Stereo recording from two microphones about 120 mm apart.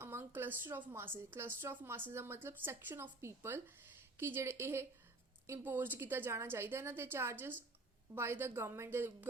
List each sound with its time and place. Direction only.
0.0 s a woman's voice: 20° right (ahead or behind)